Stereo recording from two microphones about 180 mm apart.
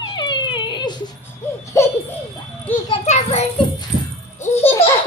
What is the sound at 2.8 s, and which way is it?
Children playing, 35° left (ahead or behind).